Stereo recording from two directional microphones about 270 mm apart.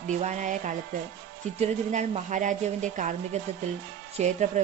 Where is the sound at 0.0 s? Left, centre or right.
Right.